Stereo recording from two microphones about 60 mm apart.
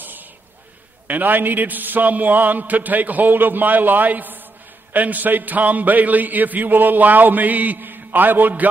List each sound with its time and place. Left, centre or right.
1.0 s a man's voice: right